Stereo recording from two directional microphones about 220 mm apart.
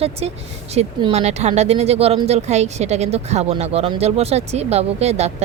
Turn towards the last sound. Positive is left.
turn(degrees=-30)  # may be behind; listen again after turning